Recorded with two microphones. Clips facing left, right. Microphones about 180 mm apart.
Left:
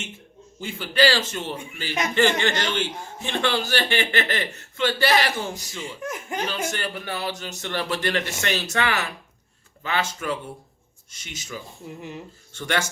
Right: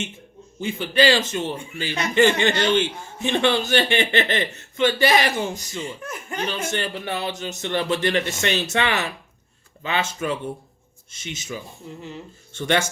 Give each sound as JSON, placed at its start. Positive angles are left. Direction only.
{"t": 0.6, "sound": "a man's voice", "side_deg": -20}
{"t": 5.8, "sound": "speech", "side_deg": 15}
{"t": 6.4, "sound": "a man's voice", "side_deg": -20}
{"t": 11.9, "sound": "speech", "side_deg": 15}
{"t": 12.5, "sound": "a man's voice", "side_deg": -20}